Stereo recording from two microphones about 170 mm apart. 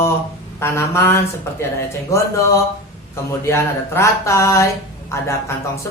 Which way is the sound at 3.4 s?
15° left (ahead or behind).